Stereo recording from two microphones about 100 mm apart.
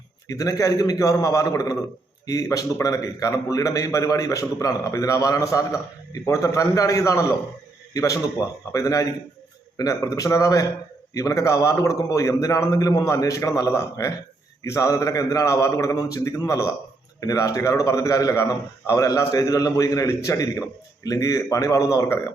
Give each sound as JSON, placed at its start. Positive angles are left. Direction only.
{"t": 0.3, "sound": "a man's voice", "side_deg": 35}